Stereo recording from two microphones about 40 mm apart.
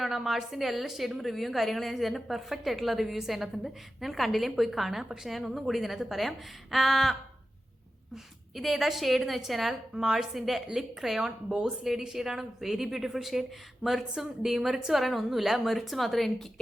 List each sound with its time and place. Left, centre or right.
0.0 s a woman's voice: centre
9.9 s a woman's voice: centre
11.4 s speech: centre
11.9 s a woman's voice: centre